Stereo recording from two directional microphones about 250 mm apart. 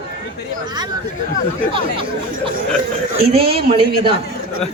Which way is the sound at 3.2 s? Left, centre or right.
Right.